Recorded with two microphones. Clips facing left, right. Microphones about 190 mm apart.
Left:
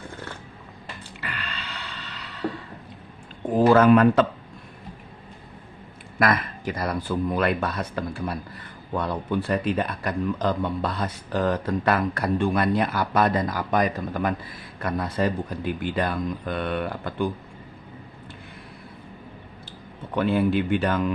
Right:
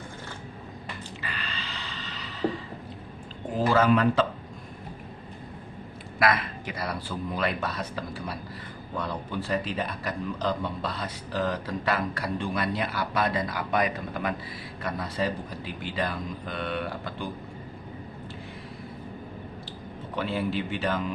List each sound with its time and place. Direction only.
1.2 s a sound: 60° left (ahead or behind)
3.5 s speech: 55° left (ahead or behind)
6.1 s speech: 45° left (ahead or behind)
20.1 s speech: 55° left (ahead or behind)